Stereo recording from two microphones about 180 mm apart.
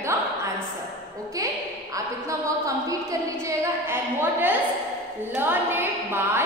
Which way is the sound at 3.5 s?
15° right (ahead or behind).